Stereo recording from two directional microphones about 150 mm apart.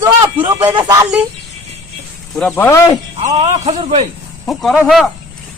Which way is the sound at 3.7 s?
40° right (ahead or behind).